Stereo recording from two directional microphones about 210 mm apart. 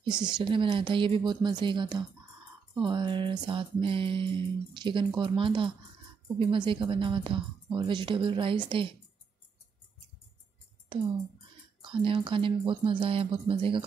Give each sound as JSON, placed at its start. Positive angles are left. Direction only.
{"t": 0.3, "sound": "music", "side_deg": -25}
{"t": 11.8, "sound": "music", "side_deg": -25}